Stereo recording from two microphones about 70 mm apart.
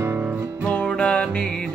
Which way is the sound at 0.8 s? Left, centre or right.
Centre.